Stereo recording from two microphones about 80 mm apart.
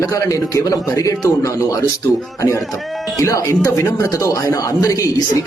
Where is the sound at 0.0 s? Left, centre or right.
Left.